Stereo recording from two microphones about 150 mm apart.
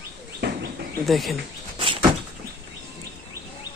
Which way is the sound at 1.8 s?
35° right (ahead or behind).